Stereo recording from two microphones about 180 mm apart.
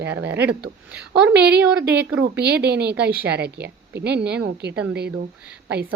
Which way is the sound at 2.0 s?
70° right (ahead or behind).